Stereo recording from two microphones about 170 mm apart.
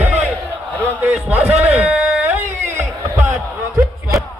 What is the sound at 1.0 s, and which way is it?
Speech, 10° right (ahead or behind).